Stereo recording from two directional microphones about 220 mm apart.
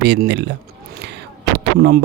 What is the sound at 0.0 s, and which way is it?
Speech, 50° right (ahead or behind).